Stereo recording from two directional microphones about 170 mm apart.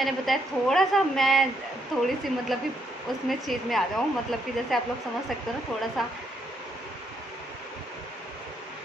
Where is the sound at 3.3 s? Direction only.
Centre (ahead or behind).